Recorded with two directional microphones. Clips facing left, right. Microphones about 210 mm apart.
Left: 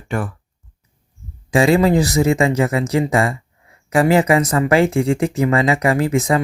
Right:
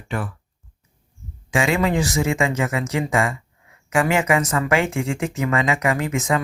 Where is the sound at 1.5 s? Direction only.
35° left (ahead or behind).